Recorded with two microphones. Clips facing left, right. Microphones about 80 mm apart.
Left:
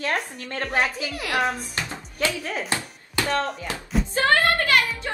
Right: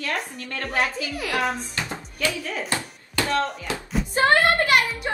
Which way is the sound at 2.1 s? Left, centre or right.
Left.